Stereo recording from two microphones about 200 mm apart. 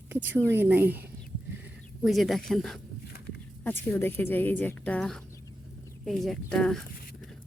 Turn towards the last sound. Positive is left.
turn(degrees=5)  # may be behind; listen again after turning